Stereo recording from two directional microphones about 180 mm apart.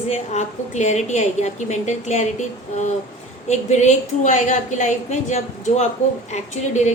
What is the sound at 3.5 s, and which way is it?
A woman's voice, 40° left (ahead or behind).